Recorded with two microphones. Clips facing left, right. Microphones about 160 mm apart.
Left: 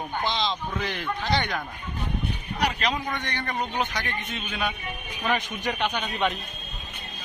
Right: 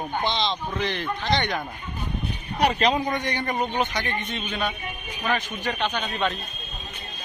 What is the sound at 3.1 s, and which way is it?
Speech, 15° right (ahead or behind).